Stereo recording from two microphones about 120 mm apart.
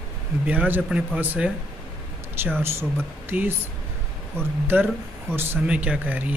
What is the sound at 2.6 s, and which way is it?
Speech, 20° right (ahead or behind).